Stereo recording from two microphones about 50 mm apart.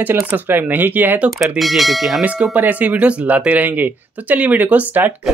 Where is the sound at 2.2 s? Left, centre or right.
Right.